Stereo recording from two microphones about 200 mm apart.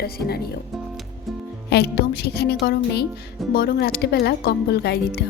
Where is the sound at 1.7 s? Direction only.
55° left (ahead or behind).